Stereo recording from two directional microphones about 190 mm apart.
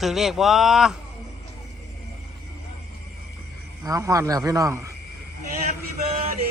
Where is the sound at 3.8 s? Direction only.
15° right (ahead or behind).